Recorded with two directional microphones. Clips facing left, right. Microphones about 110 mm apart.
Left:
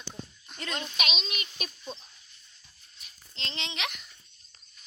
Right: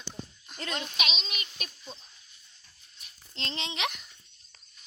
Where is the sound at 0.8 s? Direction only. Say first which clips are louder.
Left 1 dB; centre (ahead or behind).